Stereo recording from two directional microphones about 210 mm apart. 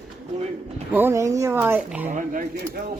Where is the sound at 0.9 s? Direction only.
10° right (ahead or behind).